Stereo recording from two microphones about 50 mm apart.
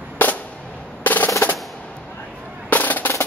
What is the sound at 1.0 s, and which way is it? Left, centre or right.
Percussion, left.